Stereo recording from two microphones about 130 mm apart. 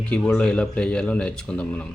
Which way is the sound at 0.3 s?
5° left (ahead or behind).